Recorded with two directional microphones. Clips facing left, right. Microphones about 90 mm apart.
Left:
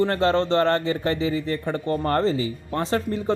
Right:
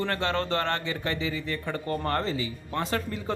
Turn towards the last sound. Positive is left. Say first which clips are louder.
# left 7 dB
turn(degrees=30)  # may be behind; listen again after turning